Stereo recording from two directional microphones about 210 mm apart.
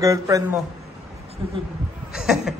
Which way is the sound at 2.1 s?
Centre (ahead or behind).